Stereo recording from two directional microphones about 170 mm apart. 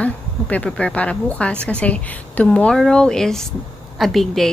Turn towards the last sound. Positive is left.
turn(degrees=0)  # may be behind; listen again after turning